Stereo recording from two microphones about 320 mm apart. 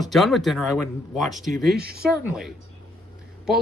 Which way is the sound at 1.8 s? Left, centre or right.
Right.